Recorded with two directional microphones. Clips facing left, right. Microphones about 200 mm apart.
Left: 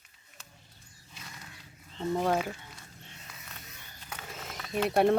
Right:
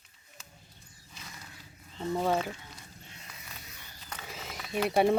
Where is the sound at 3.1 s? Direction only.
Centre (ahead or behind).